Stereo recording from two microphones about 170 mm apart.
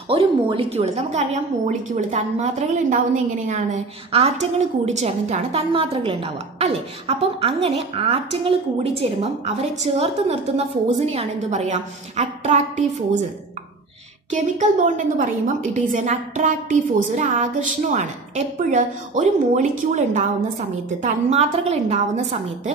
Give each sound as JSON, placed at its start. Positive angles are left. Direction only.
{"t": 0.1, "sound": "a woman's voice", "side_deg": -35}
{"t": 14.3, "sound": "a woman's voice", "side_deg": -50}